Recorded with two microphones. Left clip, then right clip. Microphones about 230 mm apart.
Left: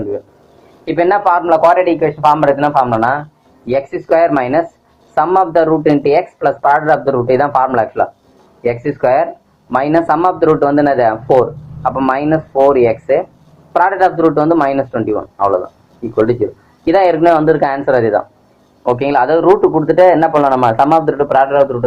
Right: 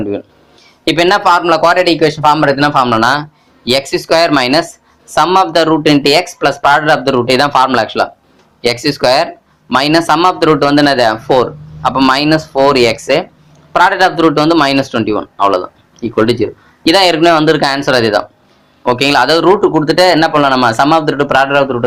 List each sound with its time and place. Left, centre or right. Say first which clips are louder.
0.9 s a man's voice: right 2 dB; right
1.2 s speech: right 1 dB; right
6.7 s a man's voice: right 2 dB; right
7.1 s speech: right 2 dB; right
10.8 s a man's voice: right 1 dB; right
16.8 s a man's voice: right 2 dB; right